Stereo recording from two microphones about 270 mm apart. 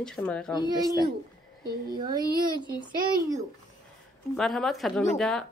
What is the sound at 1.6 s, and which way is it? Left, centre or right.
Speech, right.